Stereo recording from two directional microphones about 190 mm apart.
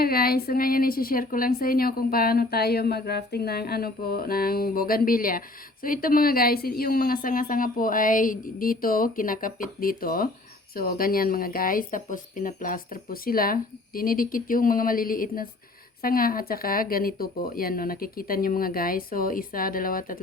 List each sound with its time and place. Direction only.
0.0 s a woman's voice: 50° left (ahead or behind)